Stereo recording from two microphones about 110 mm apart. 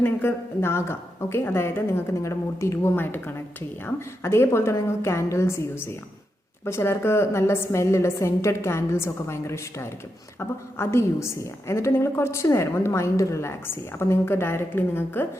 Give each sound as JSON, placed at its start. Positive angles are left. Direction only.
{"t": 0.0, "sound": "a woman's voice", "side_deg": 20}